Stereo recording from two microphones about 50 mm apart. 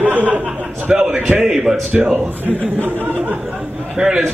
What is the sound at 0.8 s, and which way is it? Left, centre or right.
Speech, centre.